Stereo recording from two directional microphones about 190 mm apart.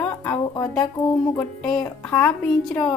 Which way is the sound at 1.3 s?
5° left (ahead or behind).